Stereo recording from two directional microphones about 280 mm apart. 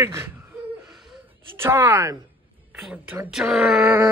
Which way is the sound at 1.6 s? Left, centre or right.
Centre.